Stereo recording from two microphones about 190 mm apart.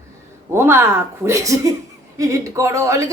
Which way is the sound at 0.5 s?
10° right (ahead or behind).